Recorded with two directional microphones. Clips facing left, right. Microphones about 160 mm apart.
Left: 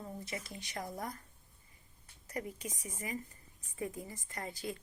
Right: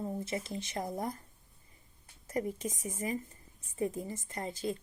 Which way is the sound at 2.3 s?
45° right (ahead or behind).